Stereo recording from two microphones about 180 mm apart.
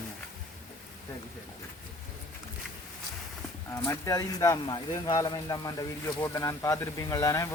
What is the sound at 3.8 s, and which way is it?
Speech, 20° left (ahead or behind).